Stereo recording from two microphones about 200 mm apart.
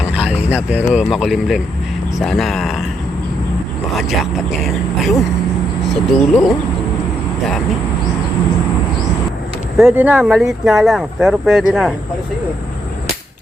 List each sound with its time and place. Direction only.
0.1 s a sound: 5° right (ahead or behind)
0.9 s speech: centre (ahead or behind)
3.9 s speech: centre (ahead or behind)
9.7 s speech: 5° right (ahead or behind)